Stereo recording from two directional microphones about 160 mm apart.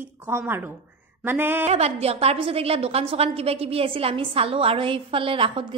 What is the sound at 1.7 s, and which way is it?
A woman's voice, 40° right (ahead or behind).